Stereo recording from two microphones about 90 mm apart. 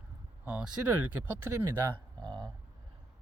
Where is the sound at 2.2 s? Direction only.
55° right (ahead or behind).